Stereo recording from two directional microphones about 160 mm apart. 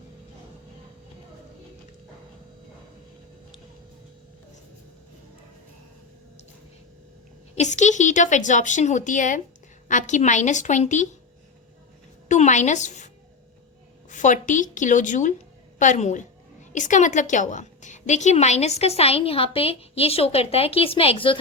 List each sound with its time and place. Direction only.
7.5 s a woman's voice: 45° left (ahead or behind)
12.3 s a sound: 50° left (ahead or behind)
14.1 s a woman's voice: 50° left (ahead or behind); by 21.3 s 35° left (ahead or behind)